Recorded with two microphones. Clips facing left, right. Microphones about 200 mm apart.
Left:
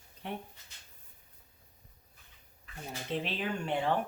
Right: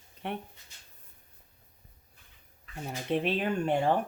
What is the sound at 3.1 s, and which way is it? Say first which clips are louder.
Speech: right 6 dB; 55° right (ahead or behind).